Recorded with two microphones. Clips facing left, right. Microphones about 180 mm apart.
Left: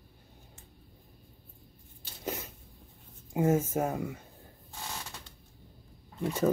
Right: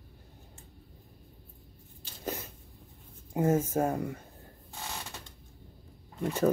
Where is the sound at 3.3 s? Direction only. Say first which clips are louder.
Even; 10° left (ahead or behind).